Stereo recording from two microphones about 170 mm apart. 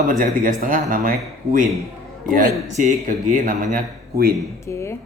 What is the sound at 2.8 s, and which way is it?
Speech, 50° right (ahead or behind).